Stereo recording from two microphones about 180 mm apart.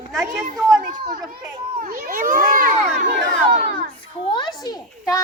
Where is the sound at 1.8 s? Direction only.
50° right (ahead or behind).